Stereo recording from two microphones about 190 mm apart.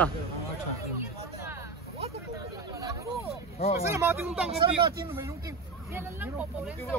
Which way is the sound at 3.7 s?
15° right (ahead or behind).